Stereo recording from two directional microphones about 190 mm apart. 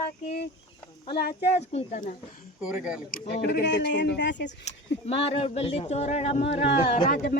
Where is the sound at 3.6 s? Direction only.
65° left (ahead or behind).